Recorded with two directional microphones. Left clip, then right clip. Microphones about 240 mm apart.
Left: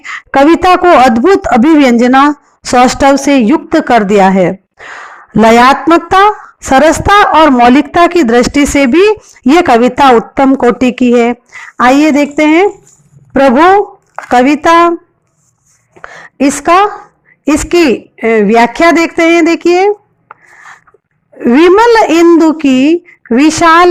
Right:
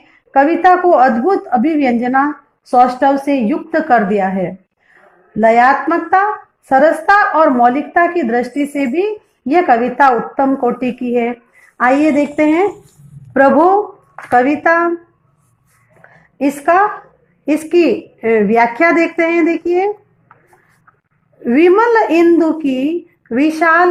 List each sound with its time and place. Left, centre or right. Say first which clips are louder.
0.1 s speech: left 6 dB; left
14.2 s speech: left 5 dB; left
16.0 s a sound: left 7 dB; left
17.4 s speech: left 5 dB; left
21.3 s speech: left 5 dB; left